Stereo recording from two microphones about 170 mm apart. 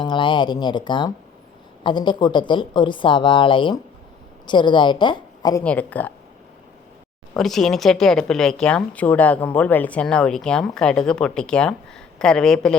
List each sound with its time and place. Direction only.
0.0 s a woman's voice: 30° left (ahead or behind)
5.6 s speech: 10° left (ahead or behind)
7.3 s speech: centre (ahead or behind)